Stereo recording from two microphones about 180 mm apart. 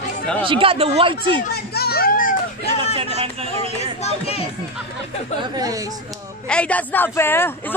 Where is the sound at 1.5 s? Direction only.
60° left (ahead or behind).